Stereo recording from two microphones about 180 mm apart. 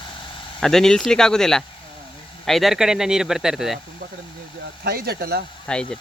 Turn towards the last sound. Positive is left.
turn(degrees=5)  # may be behind; listen again after turning